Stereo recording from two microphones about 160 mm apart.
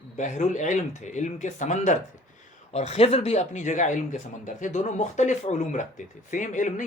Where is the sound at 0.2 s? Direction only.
50° left (ahead or behind).